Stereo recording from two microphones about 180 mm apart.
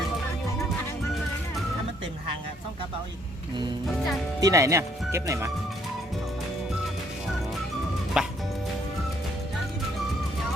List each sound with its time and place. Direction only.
4.4 s speech: 20° right (ahead or behind)
8.1 s music: 5° right (ahead or behind)